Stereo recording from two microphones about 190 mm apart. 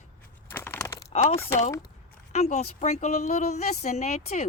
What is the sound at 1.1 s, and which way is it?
A woman's voice, 35° left (ahead or behind).